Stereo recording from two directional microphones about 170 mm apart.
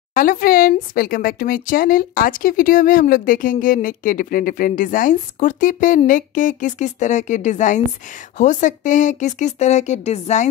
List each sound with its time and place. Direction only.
0.1 s speech: 55° left (ahead or behind)